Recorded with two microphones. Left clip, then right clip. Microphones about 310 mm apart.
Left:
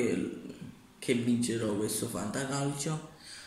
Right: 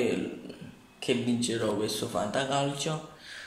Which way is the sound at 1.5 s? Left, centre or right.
Right.